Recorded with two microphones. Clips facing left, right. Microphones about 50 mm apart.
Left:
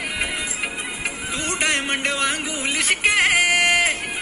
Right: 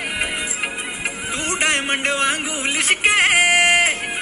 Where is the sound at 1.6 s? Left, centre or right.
Right.